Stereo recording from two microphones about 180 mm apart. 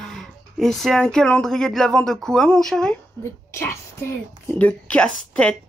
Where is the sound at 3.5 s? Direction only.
15° left (ahead or behind).